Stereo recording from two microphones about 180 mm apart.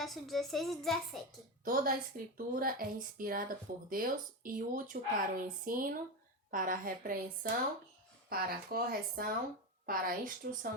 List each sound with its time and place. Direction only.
0.0 s a woman's voice: centre (ahead or behind)
1.6 s speech: 50° right (ahead or behind)